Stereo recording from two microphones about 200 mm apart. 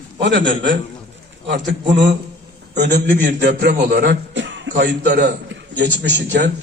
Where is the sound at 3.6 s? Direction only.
55° right (ahead or behind).